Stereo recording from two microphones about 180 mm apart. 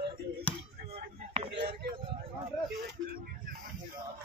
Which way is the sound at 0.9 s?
35° right (ahead or behind).